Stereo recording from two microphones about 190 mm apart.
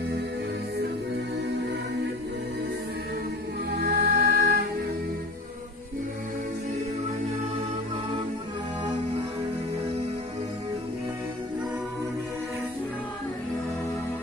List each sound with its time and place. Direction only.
3.7 s music: 55° right (ahead or behind)